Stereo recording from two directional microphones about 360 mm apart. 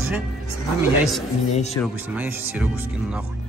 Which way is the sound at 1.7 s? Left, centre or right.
Centre.